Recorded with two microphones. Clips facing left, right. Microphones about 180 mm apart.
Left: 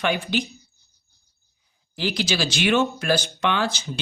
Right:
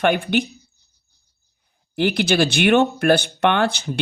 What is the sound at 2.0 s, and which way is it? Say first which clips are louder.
Speech: right 7 dB; 60° right (ahead or behind).